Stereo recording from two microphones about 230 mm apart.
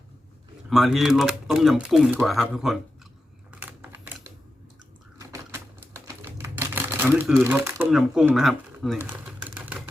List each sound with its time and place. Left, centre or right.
0.7 s speech: centre
3.5 s computer keyboard: centre
5.2 s typewriter: centre
9.0 s typing: centre